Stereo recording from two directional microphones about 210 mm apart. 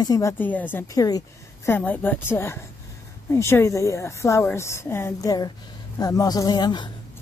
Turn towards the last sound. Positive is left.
turn(degrees=20)  # may be behind; listen again after turning